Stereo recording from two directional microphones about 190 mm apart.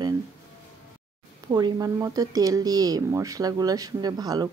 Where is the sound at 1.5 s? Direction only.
20° right (ahead or behind).